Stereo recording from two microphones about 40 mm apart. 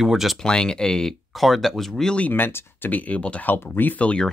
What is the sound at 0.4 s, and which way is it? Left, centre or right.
Speech, centre.